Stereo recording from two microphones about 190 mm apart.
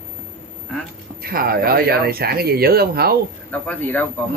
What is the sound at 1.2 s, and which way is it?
Speech, 50° right (ahead or behind).